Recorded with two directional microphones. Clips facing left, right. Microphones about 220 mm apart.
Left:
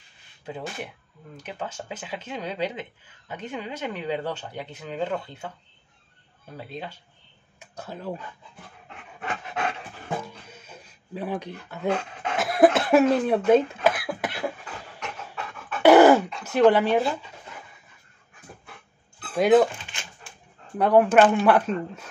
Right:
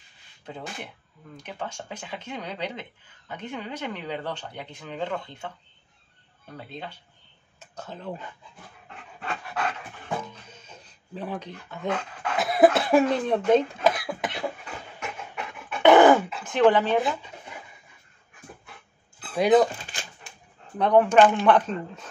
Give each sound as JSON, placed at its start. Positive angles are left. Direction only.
{"t": 1.3, "sound": "speech", "side_deg": 5}
{"t": 6.5, "sound": "speech", "side_deg": 5}
{"t": 9.2, "sound": "pant", "side_deg": 20}
{"t": 10.2, "sound": "dog", "side_deg": 10}
{"t": 11.9, "sound": "speech", "side_deg": 20}
{"t": 12.4, "sound": "cough", "side_deg": 0}
{"t": 12.7, "sound": "speech", "side_deg": 0}
{"t": 15.0, "sound": "pant", "side_deg": -5}
{"t": 15.3, "sound": "dog", "side_deg": -15}
{"t": 15.8, "sound": "dog", "side_deg": 10}
{"t": 16.4, "sound": "speech", "side_deg": 10}
{"t": 19.3, "sound": "speech", "side_deg": 0}
{"t": 20.7, "sound": "speech", "side_deg": 5}